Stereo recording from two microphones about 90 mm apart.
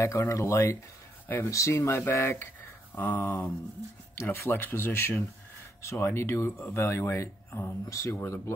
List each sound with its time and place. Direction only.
0.0 s speech: 35° left (ahead or behind)